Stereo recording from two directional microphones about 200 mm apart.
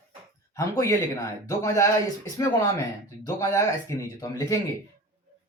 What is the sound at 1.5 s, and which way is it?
Speech, 15° left (ahead or behind).